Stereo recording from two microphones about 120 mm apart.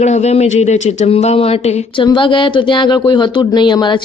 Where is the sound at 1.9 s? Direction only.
45° left (ahead or behind).